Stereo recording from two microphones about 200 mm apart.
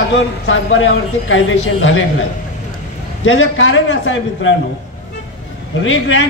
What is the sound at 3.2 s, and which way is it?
A man's voice, 85° left.